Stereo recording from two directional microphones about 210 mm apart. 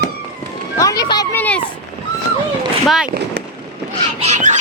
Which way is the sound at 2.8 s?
Centre (ahead or behind).